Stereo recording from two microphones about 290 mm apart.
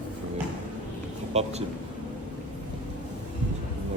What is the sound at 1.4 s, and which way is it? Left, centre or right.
Speech, right.